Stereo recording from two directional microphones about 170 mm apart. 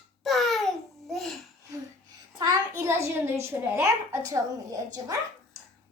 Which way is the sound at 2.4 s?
20° right (ahead or behind).